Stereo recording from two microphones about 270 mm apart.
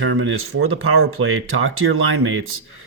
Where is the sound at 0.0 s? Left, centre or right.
Right.